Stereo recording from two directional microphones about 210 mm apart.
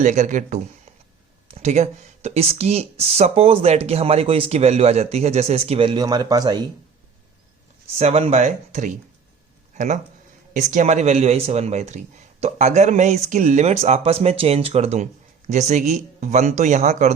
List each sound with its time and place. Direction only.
0.0 s speech: 35° right (ahead or behind); by 6.7 s 20° right (ahead or behind)
7.9 s speech: 30° right (ahead or behind)